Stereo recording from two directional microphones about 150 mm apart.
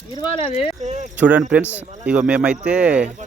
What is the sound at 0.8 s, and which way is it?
Cricket, 50° right (ahead or behind).